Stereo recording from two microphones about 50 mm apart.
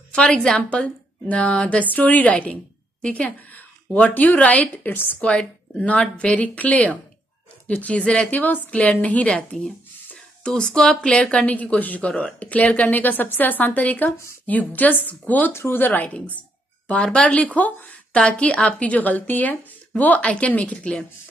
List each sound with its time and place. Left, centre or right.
0.1 s a woman's voice: centre
4.8 s a woman's voice: left
5.2 s speech: centre
8.3 s a woman's voice: left
9.5 s a woman's voice: centre; by 15.5 s left
15.5 s speech: left
15.8 s a woman's voice: left
17.0 s a woman's voice: left
20.2 s speech: left